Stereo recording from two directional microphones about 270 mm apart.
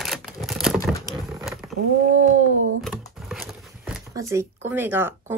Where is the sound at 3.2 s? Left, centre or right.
Centre.